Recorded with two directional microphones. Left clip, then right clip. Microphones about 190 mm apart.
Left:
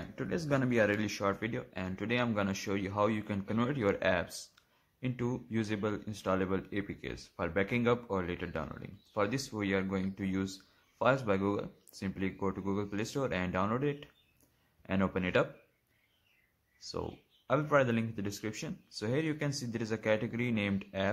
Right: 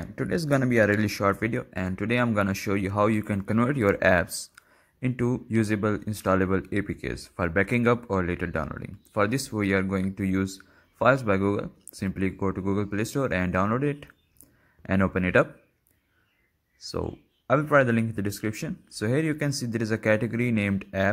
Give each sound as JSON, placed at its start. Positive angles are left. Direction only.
{"t": 0.0, "sound": "speech", "side_deg": -25}
{"t": 16.8, "sound": "speech", "side_deg": -20}